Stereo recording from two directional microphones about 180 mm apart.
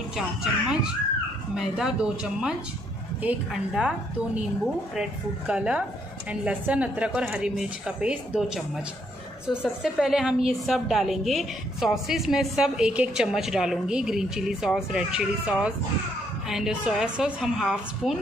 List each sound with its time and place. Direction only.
0.1 s a woman's voice: centre (ahead or behind)
5.5 s a woman's voice: 5° right (ahead or behind)